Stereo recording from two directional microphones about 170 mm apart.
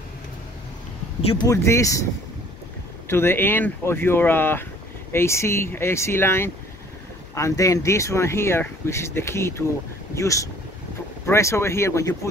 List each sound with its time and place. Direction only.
1.5 s speech: 15° left (ahead or behind)
3.1 s speech: 15° left (ahead or behind)